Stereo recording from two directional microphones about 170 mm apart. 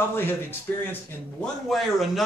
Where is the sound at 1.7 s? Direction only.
Centre (ahead or behind).